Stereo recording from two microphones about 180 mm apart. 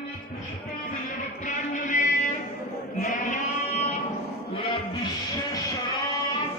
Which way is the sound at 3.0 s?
45° left (ahead or behind).